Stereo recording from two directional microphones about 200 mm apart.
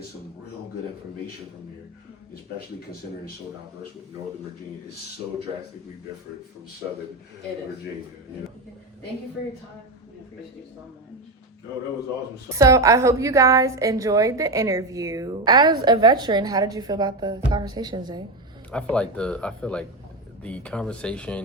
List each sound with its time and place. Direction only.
12.5 s a woman's voice: 15° right (ahead or behind)
18.7 s speech: 5° left (ahead or behind)